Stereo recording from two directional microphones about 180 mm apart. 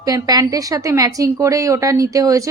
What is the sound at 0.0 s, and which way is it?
A woman's voice, 20° right (ahead or behind).